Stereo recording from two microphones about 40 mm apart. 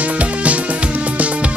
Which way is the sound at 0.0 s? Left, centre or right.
Right.